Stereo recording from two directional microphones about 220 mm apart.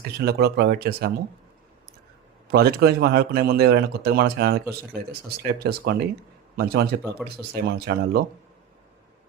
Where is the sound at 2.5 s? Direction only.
45° right (ahead or behind).